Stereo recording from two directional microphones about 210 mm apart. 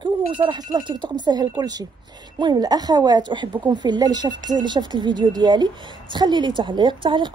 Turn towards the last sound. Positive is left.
turn(degrees=-25)  # may be behind; listen again after turning